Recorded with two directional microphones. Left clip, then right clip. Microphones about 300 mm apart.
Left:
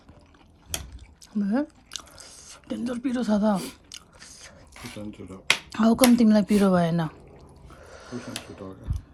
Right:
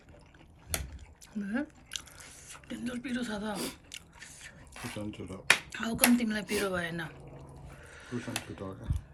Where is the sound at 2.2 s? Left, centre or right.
Centre.